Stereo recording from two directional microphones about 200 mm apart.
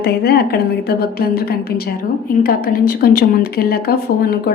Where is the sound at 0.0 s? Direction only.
50° left (ahead or behind).